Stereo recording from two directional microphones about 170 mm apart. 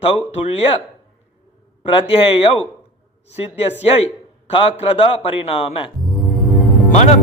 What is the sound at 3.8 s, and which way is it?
A man's voice, 35° left (ahead or behind).